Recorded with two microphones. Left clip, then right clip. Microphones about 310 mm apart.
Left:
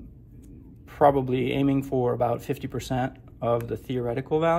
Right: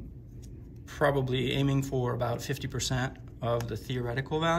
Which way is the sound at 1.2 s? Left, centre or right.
Centre.